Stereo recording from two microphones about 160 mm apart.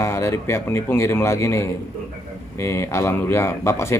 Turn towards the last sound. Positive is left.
turn(degrees=15)  # may be behind; listen again after turning